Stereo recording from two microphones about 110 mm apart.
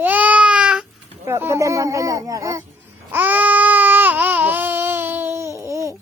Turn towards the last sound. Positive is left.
turn(degrees=-30)  # may be behind; listen again after turning